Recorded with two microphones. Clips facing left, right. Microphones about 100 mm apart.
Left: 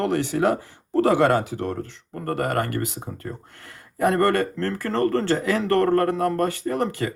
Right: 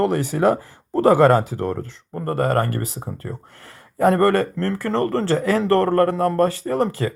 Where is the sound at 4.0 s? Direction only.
30° right (ahead or behind).